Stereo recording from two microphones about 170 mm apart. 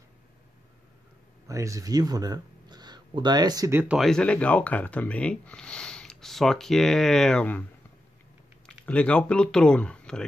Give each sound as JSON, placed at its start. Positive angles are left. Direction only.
{"t": 1.5, "sound": "speech", "side_deg": -20}
{"t": 3.9, "sound": "speech", "side_deg": 0}
{"t": 8.6, "sound": "speech", "side_deg": 5}